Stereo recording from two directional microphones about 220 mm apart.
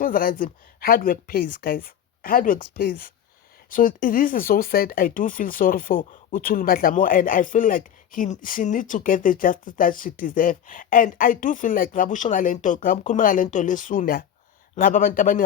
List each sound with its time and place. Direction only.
0.0 s speech: 40° left (ahead or behind)